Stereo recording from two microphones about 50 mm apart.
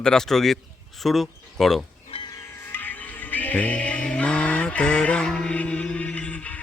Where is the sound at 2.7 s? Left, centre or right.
Left; by 5.5 s centre.